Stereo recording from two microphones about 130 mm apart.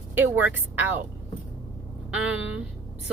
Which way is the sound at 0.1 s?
15° right (ahead or behind).